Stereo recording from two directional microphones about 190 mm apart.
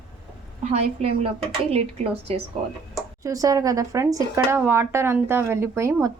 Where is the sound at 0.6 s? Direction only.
35° right (ahead or behind).